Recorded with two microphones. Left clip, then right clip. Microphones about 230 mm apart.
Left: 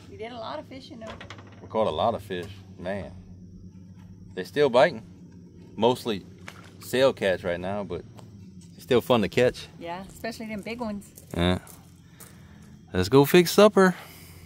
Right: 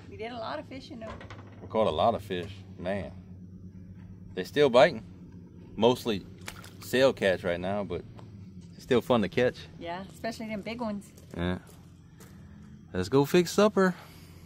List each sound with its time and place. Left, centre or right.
0.1 s speech: centre
1.0 s speech: left
1.7 s a man's voice: centre
4.4 s a man's voice: centre
8.8 s speech: left
9.8 s a man's voice: centre
11.3 s speech: left
12.9 s speech: left